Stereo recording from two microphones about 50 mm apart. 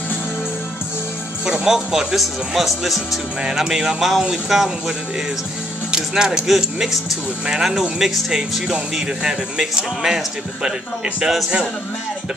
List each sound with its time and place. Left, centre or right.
1.4 s speech: centre